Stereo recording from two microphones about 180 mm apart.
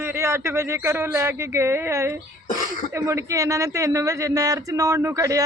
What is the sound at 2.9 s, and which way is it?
Speech, 15° right (ahead or behind).